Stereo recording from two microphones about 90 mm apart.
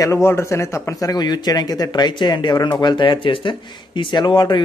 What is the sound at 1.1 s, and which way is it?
Speech, 50° left (ahead or behind).